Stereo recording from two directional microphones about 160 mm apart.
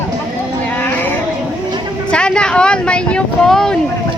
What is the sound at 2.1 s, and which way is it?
Vehicle, 5° left (ahead or behind).